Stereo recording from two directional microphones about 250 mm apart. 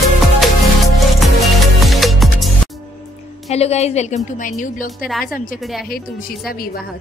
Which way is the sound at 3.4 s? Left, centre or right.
Left.